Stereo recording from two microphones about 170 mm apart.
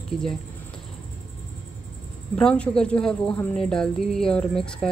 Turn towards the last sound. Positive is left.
turn(degrees=5)  # may be behind; listen again after turning